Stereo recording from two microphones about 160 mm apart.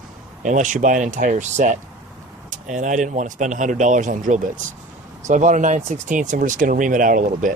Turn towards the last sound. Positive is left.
turn(degrees=-55)  # may be behind; listen again after turning